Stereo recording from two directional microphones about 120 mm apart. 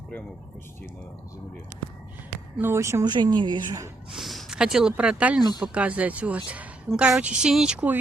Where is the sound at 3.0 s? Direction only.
40° right (ahead or behind).